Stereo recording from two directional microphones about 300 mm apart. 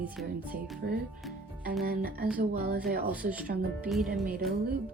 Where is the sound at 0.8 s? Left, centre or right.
Right.